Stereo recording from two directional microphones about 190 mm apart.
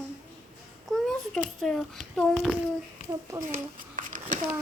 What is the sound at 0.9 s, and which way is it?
A child's voice, centre (ahead or behind).